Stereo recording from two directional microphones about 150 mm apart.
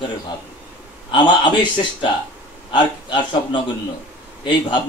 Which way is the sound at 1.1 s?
30° left (ahead or behind).